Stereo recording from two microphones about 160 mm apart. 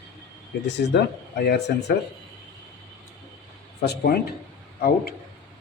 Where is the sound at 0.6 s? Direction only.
90° left.